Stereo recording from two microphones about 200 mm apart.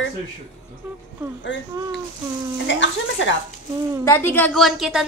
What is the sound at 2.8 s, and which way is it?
Speech, 65° left (ahead or behind).